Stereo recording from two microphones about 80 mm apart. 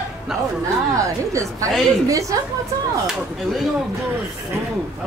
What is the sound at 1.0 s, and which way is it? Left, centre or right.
A woman's voice, right.